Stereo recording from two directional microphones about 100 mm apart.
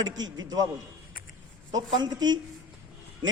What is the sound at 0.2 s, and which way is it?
Mantra, 40° right (ahead or behind).